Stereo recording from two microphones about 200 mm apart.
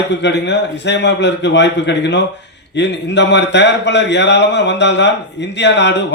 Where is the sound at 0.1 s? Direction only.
60° left (ahead or behind).